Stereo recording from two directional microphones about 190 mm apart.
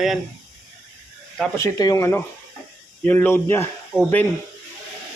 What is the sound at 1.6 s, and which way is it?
Speech, 20° left (ahead or behind).